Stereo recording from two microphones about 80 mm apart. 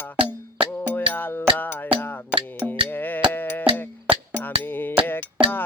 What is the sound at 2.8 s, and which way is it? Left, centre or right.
Sheep, left.